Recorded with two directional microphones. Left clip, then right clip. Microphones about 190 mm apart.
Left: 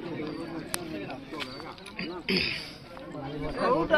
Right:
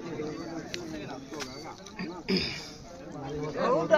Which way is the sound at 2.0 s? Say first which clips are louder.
Left 3 dB; 60° right (ahead or behind).